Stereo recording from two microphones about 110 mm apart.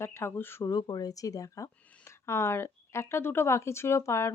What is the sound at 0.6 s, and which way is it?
Speech, 35° left (ahead or behind).